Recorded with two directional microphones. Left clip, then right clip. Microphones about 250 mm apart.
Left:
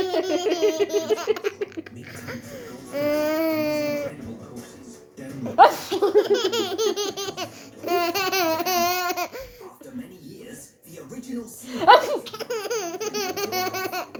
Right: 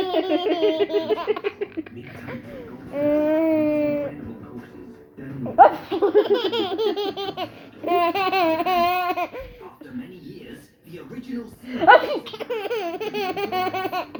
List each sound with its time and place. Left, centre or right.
0.0 s laughter: centre
2.9 s baby cry: centre
5.5 s laughter: left
6.0 s laughter: centre
11.7 s a sound: centre
12.2 s laughter: centre